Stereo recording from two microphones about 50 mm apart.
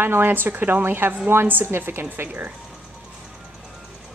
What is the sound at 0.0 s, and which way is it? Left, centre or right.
A woman's voice, right.